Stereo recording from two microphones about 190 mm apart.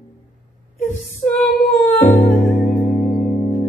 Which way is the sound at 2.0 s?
40° left (ahead or behind).